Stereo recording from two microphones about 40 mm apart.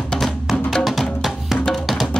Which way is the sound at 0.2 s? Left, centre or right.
Centre.